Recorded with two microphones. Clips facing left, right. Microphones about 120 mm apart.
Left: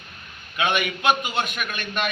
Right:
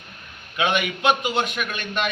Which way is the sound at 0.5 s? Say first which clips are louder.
Right 1 dB; 25° right (ahead or behind).